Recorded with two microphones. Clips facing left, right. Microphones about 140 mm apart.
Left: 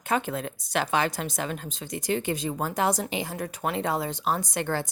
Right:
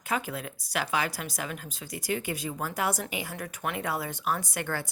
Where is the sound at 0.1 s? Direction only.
35° left (ahead or behind).